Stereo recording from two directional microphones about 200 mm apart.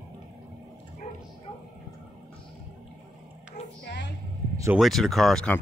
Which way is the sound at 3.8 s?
60° left (ahead or behind).